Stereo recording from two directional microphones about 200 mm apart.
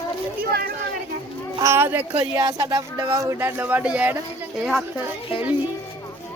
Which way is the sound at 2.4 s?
20° right (ahead or behind).